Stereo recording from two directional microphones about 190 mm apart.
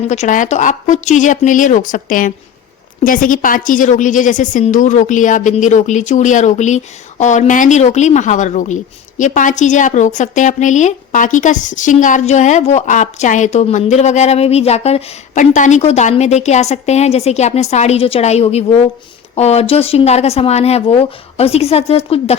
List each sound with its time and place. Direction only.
0.1 s a woman's voice: 40° left (ahead or behind)